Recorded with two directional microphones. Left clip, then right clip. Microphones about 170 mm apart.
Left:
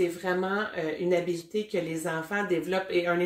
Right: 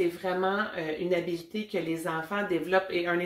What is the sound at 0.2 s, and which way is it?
Speech, 25° left (ahead or behind).